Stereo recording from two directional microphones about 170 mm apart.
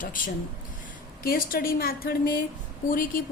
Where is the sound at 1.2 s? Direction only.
60° left (ahead or behind).